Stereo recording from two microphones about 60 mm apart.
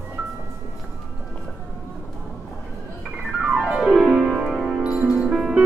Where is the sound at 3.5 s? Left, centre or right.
Centre.